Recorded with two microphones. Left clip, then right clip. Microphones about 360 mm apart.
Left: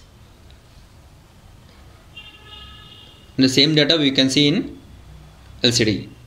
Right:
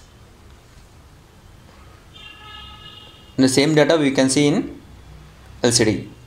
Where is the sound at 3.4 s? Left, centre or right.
Right.